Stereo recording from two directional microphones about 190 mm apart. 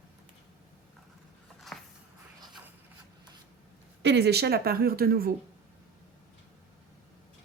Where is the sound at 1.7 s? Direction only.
Centre (ahead or behind).